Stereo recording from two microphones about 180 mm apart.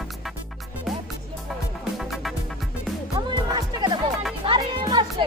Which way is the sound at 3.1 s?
20° right (ahead or behind).